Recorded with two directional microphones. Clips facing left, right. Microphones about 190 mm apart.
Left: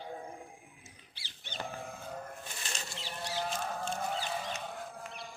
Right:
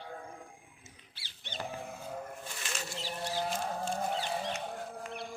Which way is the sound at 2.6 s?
35° left (ahead or behind).